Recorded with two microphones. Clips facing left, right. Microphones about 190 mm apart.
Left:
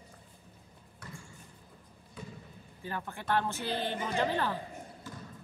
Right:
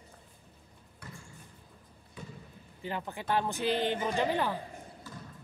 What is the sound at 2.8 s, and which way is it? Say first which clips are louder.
A woman's voice: right 2 dB; 20° right (ahead or behind).